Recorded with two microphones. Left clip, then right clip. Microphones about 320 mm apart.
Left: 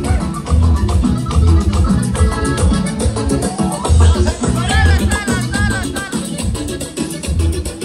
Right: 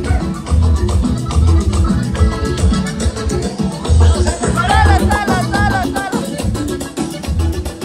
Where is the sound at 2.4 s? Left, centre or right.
Centre.